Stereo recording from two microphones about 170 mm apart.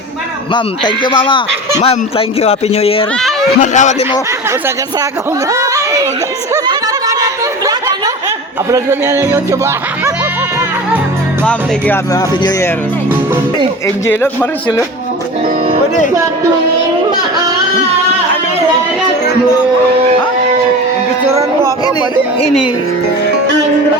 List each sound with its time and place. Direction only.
0.5 s a man's voice: 25° left (ahead or behind)
3.6 s speech: 45° left (ahead or behind)
5.5 s a sound: 20° right (ahead or behind)
6.5 s chatter: 20° right (ahead or behind)
8.7 s music: 15° right (ahead or behind)
13.8 s a man's voice: 15° left (ahead or behind)